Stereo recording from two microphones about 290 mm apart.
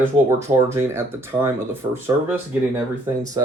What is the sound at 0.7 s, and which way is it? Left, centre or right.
Speech, centre.